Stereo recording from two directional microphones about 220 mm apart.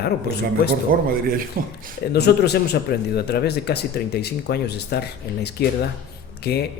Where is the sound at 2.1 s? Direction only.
50° left (ahead or behind).